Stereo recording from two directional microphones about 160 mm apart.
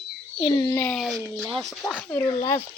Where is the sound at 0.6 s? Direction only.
20° left (ahead or behind).